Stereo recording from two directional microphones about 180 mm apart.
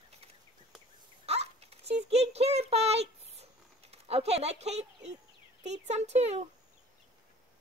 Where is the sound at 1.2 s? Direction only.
35° right (ahead or behind).